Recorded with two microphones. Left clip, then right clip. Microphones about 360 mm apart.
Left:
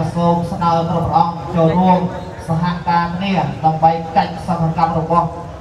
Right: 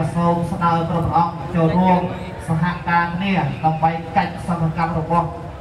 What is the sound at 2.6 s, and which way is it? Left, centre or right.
Speech, centre.